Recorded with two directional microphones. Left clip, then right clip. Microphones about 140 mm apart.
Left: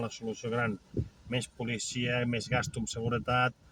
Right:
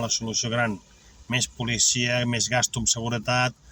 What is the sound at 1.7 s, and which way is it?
Speech, 25° right (ahead or behind).